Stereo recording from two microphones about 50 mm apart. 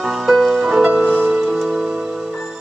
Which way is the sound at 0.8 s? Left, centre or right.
Right.